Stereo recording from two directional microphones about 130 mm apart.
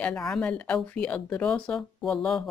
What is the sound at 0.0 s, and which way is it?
Speech, 5° left (ahead or behind).